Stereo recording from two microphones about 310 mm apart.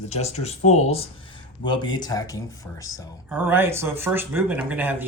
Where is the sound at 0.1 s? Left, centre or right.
Left.